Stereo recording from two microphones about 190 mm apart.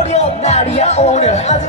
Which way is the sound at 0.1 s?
35° left (ahead or behind).